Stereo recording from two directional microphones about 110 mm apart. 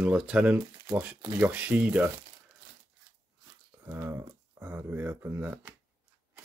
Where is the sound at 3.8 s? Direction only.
25° right (ahead or behind).